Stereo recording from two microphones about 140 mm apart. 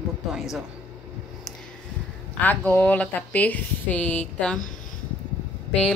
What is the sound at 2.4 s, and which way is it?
A woman's voice, 10° left (ahead or behind).